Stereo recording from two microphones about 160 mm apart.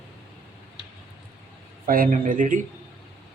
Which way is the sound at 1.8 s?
60° right (ahead or behind).